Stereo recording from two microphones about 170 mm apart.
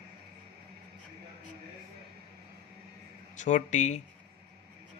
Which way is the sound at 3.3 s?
45° left (ahead or behind).